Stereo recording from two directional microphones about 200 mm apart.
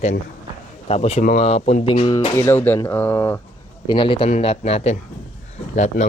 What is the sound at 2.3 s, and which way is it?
Speech, 10° left (ahead or behind).